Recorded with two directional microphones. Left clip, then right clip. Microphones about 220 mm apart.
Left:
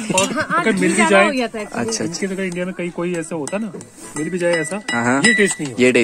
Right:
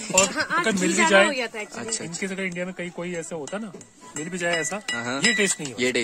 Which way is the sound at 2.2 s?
35° right (ahead or behind).